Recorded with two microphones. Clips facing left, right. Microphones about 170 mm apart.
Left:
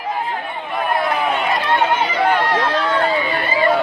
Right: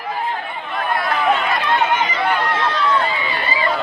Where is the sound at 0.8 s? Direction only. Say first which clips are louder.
Left 2 dB; 15° left (ahead or behind).